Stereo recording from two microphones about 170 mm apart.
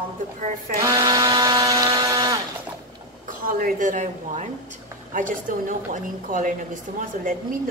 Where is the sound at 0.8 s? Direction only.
20° right (ahead or behind).